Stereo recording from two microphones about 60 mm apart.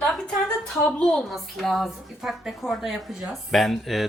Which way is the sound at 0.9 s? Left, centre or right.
Centre.